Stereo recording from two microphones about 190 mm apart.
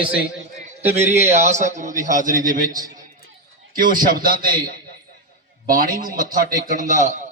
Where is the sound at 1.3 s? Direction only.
40° right (ahead or behind).